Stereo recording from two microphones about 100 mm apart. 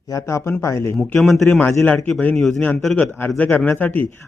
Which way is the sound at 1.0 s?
Centre (ahead or behind).